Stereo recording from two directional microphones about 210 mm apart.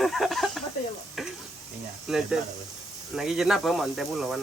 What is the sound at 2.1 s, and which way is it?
Speech, centre (ahead or behind).